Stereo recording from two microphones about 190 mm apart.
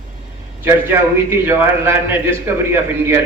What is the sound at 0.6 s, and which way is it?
A man's voice, 10° right (ahead or behind).